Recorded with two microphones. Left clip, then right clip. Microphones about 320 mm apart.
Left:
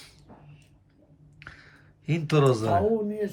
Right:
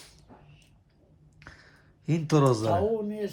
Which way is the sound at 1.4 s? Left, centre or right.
Centre.